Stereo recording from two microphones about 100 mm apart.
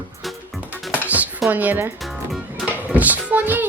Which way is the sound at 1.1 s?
15° right (ahead or behind).